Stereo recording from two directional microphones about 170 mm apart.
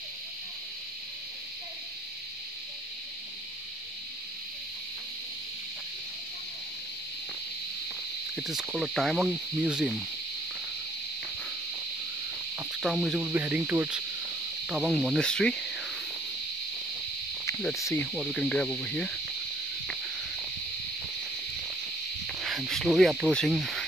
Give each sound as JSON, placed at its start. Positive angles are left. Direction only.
{"t": 8.4, "sound": "speech", "side_deg": -5}
{"t": 12.8, "sound": "speech", "side_deg": 0}
{"t": 13.2, "sound": "cricket", "side_deg": -10}
{"t": 14.7, "sound": "speech", "side_deg": 0}
{"t": 17.7, "sound": "cricket", "side_deg": 20}
{"t": 18.0, "sound": "speech", "side_deg": 0}
{"t": 22.2, "sound": "speech", "side_deg": 0}